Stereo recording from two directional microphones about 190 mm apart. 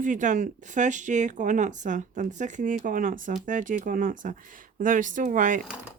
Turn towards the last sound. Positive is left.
turn(degrees=-45)  # may be behind; listen again after turning